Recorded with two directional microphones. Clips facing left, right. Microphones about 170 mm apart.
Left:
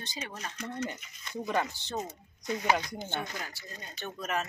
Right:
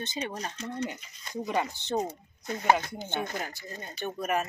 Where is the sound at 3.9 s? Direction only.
10° right (ahead or behind).